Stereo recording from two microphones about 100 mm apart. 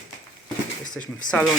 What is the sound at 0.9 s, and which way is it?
Speech, 10° left (ahead or behind).